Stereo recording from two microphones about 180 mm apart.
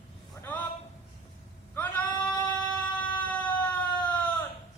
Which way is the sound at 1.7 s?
10° left (ahead or behind).